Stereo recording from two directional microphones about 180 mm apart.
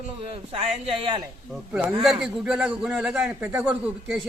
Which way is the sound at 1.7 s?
5° right (ahead or behind).